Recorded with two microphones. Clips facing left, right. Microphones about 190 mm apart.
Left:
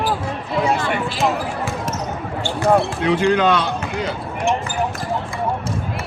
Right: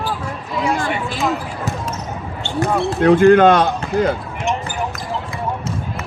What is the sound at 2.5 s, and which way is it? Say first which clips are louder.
Speech: left 1 dB; 50° right (ahead or behind).